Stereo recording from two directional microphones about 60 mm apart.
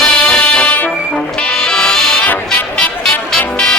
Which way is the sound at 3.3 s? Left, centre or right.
Centre.